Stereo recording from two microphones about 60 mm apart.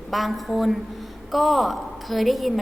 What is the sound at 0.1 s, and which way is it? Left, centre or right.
A woman's voice, centre.